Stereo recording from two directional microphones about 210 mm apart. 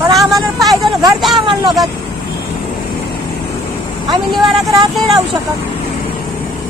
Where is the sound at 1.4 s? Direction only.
20° right (ahead or behind).